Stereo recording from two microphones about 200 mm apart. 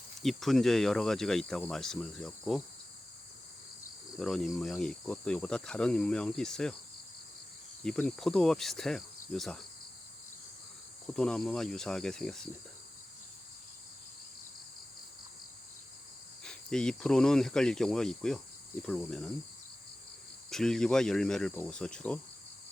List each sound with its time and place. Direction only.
0.2 s speech: centre (ahead or behind)
4.2 s speech: centre (ahead or behind)
7.9 s speech: 5° left (ahead or behind)
11.1 s speech: 5° left (ahead or behind)
16.4 s speech: 5° left (ahead or behind)
20.5 s speech: 5° left (ahead or behind)